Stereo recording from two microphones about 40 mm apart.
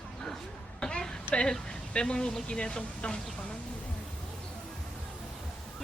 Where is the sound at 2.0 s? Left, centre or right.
Left.